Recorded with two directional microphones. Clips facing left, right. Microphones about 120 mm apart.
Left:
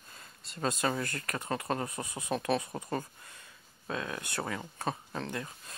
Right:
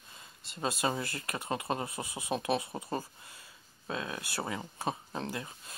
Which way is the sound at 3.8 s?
20° right (ahead or behind).